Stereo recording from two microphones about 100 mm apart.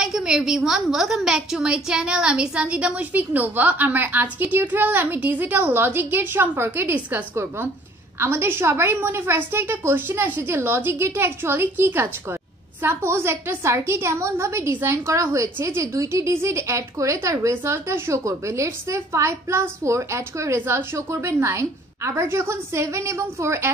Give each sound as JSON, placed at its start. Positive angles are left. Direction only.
{"t": 0.0, "sound": "a woman's voice", "side_deg": -5}